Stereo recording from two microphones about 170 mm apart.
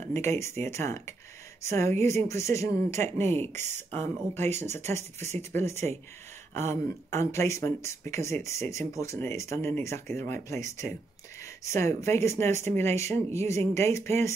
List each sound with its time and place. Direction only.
0.0 s speech: 15° left (ahead or behind)